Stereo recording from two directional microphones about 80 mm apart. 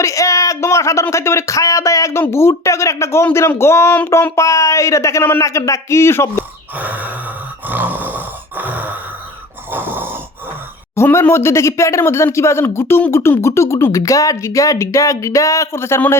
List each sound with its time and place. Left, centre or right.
0.0 s speech: left
6.7 s a sound: right
9.7 s snoring: right
10.9 s speech: left